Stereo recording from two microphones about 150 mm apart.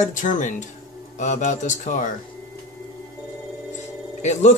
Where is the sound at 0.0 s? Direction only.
55° left (ahead or behind).